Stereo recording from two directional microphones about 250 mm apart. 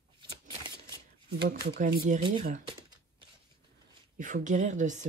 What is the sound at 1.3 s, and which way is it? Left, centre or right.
Speech, right.